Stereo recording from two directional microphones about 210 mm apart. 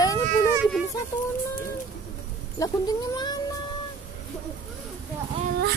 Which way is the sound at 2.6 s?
15° left (ahead or behind).